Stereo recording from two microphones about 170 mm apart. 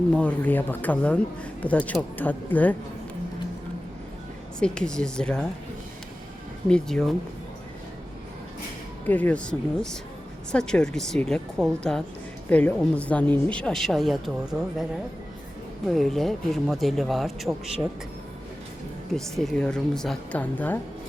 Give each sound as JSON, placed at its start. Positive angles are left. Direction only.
{"t": 0.1, "sound": "speech", "side_deg": 10}
{"t": 4.6, "sound": "speech", "side_deg": 5}
{"t": 6.7, "sound": "speech", "side_deg": 5}
{"t": 9.0, "sound": "speech", "side_deg": 10}
{"t": 15.9, "sound": "speech", "side_deg": 0}
{"t": 19.1, "sound": "speech", "side_deg": 0}